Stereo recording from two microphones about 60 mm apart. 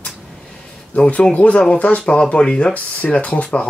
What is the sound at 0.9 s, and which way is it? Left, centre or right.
Speech, left.